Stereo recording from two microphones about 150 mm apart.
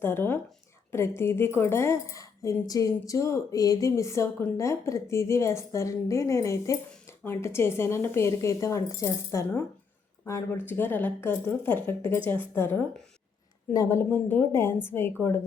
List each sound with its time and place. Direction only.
0.0 s speech: 15° left (ahead or behind)